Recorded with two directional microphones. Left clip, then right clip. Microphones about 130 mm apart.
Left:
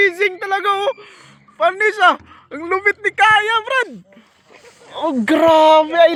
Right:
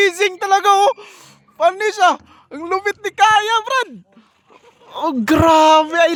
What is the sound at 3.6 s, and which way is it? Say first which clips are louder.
Speech: even; 55° right (ahead or behind).